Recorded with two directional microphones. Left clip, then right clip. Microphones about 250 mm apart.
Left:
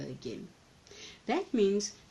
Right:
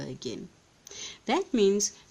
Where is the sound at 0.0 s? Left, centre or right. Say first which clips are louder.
Right 4 dB; right.